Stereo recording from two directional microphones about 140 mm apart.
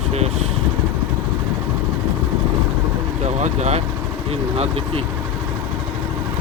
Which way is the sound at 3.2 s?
50° right (ahead or behind).